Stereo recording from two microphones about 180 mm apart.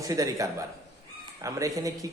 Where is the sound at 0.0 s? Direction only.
20° right (ahead or behind).